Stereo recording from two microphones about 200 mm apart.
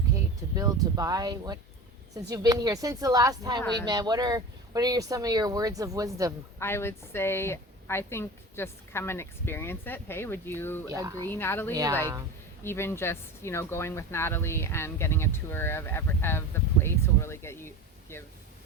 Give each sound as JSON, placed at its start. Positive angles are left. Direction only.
{"t": 0.5, "sound": "speech", "side_deg": -20}
{"t": 6.6, "sound": "a woman's voice", "side_deg": 10}
{"t": 10.9, "sound": "speech", "side_deg": -15}
{"t": 11.3, "sound": "a woman's voice", "side_deg": 10}
{"t": 11.7, "sound": "speech", "side_deg": -20}
{"t": 12.6, "sound": "a woman's voice", "side_deg": 10}